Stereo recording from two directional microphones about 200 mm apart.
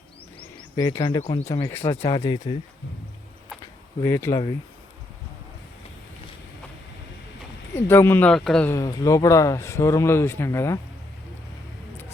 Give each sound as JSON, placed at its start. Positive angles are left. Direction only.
{"t": 0.3, "sound": "a sound", "side_deg": 20}
{"t": 1.2, "sound": "speech", "side_deg": 35}
{"t": 1.6, "sound": "speech", "side_deg": 15}
{"t": 3.6, "sound": "a sound", "side_deg": 15}
{"t": 7.8, "sound": "speech", "side_deg": 10}
{"t": 8.7, "sound": "speech", "side_deg": 15}